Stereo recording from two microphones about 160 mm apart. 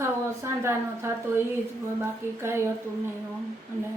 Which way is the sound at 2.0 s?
15° right (ahead or behind).